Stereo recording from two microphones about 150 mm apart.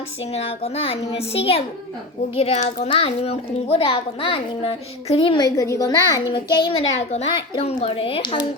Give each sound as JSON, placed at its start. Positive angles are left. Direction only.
{"t": 0.3, "sound": "a child's voice", "side_deg": 45}
{"t": 5.5, "sound": "a child's voice", "side_deg": 20}
{"t": 6.5, "sound": "a child's voice", "side_deg": 35}
{"t": 7.3, "sound": "a child's voice", "side_deg": 35}